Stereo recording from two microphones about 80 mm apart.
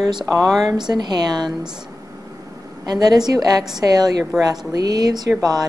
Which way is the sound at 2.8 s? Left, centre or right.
Right.